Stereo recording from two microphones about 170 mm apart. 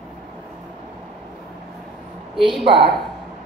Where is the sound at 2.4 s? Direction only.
30° right (ahead or behind).